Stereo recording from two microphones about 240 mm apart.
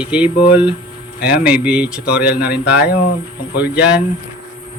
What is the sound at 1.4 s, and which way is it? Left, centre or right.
Speech, centre.